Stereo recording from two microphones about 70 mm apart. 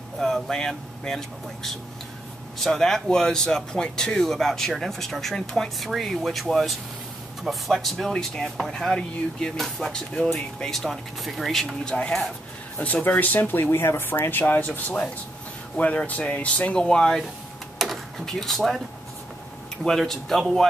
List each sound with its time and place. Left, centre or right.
0.2 s speech: centre
12.7 s speech: left
17.8 s a sound: centre
18.2 s speech: centre
19.8 s speech: centre